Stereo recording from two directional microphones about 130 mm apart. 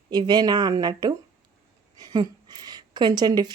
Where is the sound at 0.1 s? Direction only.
35° right (ahead or behind).